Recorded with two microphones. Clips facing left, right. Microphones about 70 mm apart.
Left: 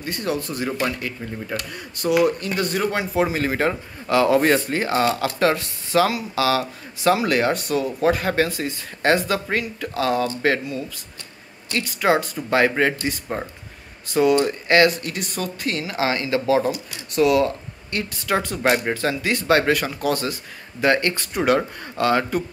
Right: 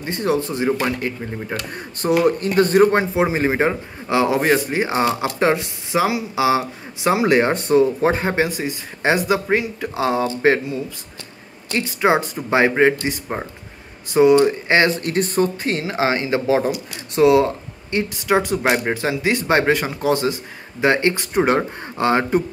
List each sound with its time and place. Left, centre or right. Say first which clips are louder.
0.0 s speech: right 5 dB; right
3.2 s speech: right 3 dB; right
4.4 s speech: right 1 dB; centre; by 14.9 s right
15.0 s speech: right 9 dB; right